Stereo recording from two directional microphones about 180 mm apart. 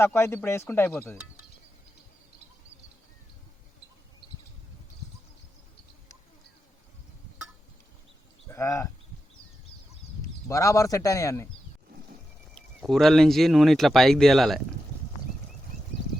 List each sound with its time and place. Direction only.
0.0 s speech: 10° left (ahead or behind)
8.4 s speech: 15° left (ahead or behind)
10.5 s speech: 20° left (ahead or behind)
12.5 s speech: centre (ahead or behind)